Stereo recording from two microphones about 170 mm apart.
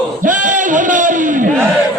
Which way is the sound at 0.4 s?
50° right (ahead or behind).